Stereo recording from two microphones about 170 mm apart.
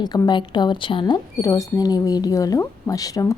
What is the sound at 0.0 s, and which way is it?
Speech, 25° left (ahead or behind).